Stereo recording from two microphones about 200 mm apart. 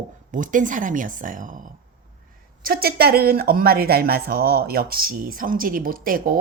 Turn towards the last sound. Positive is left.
turn(degrees=-45)  # may be behind; listen again after turning